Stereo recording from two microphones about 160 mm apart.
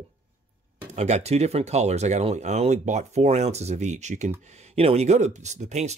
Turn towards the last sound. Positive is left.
turn(degrees=-45)  # may be behind; listen again after turning